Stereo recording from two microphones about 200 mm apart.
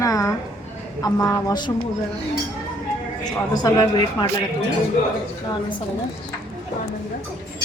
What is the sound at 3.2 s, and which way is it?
A man's voice, 20° left (ahead or behind).